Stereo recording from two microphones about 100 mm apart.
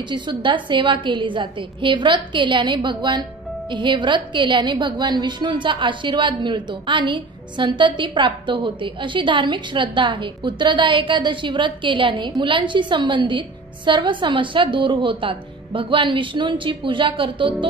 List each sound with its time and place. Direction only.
0.1 s a woman's voice: 55° right (ahead or behind)